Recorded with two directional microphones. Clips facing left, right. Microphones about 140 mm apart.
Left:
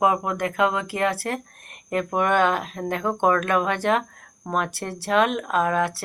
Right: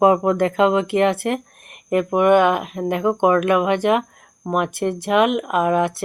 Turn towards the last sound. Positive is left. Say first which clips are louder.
# right 4 dB
turn(degrees=-20)  # may be behind; listen again after turning